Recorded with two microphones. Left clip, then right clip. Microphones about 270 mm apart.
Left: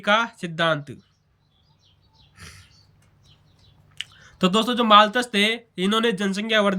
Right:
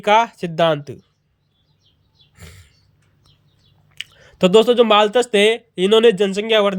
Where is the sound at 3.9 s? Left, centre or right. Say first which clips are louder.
Right 6 dB; centre.